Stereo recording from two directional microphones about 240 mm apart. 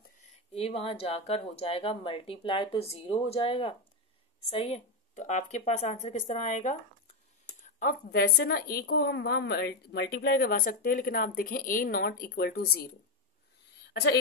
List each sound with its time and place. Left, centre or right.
0.5 s a woman's voice: left